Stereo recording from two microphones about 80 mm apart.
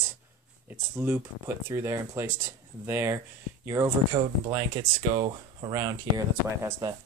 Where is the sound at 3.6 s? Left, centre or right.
Right.